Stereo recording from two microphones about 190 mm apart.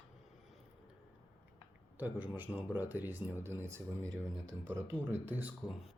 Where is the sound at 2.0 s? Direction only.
10° right (ahead or behind).